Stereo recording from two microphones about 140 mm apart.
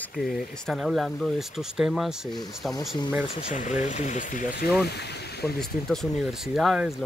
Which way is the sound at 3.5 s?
60° left (ahead or behind).